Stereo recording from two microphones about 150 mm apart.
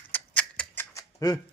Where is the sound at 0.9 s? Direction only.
25° left (ahead or behind).